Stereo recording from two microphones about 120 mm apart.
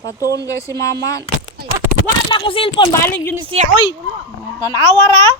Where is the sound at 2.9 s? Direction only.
20° left (ahead or behind).